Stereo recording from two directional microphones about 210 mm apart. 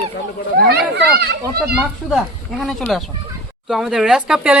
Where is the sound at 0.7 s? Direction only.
50° right (ahead or behind).